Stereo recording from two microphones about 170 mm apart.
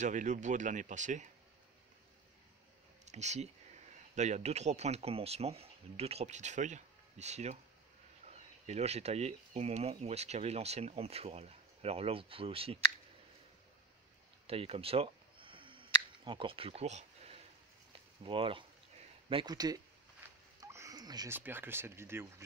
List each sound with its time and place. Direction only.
0.0 s speech: 45° right (ahead or behind)
3.1 s speech: 40° right (ahead or behind)
14.5 s a sound: 35° right (ahead or behind)
18.2 s speech: 30° right (ahead or behind)
20.6 s a sound: 20° right (ahead or behind)
21.4 s speech: 10° right (ahead or behind)